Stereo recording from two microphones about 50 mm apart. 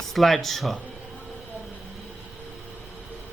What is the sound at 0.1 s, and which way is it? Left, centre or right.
Speech, centre.